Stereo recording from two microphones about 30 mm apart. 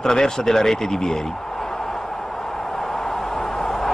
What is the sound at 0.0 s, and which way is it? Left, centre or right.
Speech, centre.